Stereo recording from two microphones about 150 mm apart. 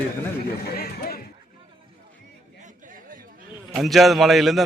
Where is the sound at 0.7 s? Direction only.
90° left.